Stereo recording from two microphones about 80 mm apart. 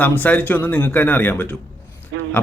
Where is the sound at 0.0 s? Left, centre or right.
Left.